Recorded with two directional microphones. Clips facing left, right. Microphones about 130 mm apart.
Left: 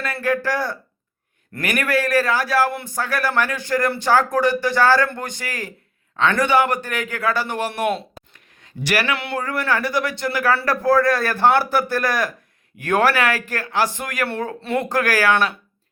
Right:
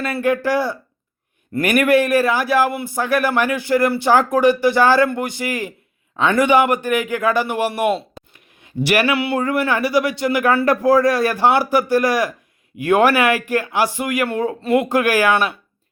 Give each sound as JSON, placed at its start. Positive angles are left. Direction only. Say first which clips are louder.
{"t": 0.0, "sound": "speech", "louder": "right 3 dB", "side_deg": -20}
{"t": 8.6, "sound": "speech", "louder": "right 5 dB", "side_deg": -15}